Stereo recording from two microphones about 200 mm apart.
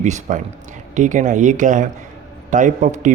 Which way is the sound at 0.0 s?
35° right (ahead or behind).